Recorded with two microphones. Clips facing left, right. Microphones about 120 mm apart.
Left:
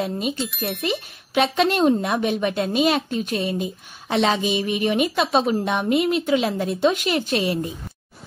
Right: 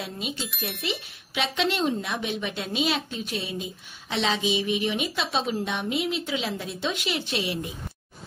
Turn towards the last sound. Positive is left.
turn(degrees=45)  # may be behind; listen again after turning